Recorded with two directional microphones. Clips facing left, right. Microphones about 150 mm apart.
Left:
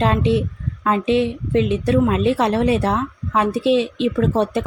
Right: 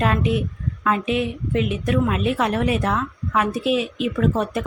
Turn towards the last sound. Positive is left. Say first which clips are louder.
# left 3 dB
turn(degrees=30)  # may be behind; listen again after turning